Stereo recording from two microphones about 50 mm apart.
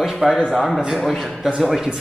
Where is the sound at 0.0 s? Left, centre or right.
Centre.